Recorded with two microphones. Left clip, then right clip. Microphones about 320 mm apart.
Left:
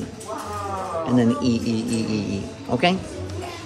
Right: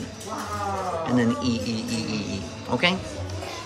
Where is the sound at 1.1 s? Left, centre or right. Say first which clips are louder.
Left 5 dB; centre.